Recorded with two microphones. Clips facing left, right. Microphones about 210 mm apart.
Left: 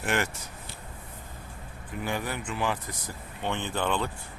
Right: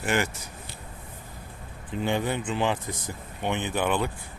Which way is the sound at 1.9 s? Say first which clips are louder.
Right 5 dB; 25° right (ahead or behind).